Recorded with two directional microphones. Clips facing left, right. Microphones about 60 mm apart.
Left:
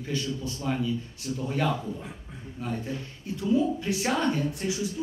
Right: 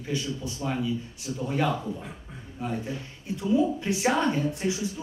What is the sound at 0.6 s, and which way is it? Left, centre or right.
Speech, centre.